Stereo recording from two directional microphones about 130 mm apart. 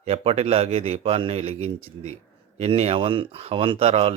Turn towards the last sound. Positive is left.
turn(degrees=-50)  # may be behind; listen again after turning